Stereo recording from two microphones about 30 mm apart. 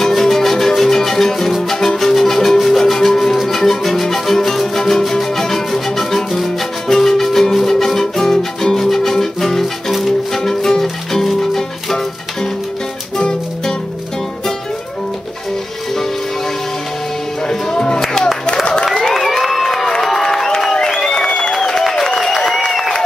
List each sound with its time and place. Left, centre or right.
0.1 s music: centre
8.7 s music: centre
13.2 s music: left
17.5 s music: left
19.1 s crowd: centre
21.5 s a sound: centre
22.2 s applause: centre
22.7 s a sound: centre